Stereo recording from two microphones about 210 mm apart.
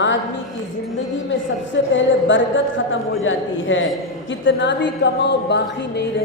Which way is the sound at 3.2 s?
65° left (ahead or behind).